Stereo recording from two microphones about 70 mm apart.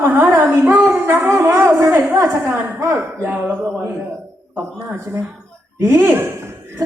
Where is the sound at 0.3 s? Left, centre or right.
Right.